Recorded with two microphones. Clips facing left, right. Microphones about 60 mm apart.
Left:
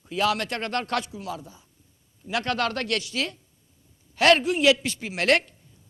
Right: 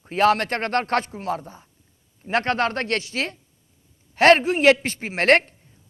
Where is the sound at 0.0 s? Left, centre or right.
Right.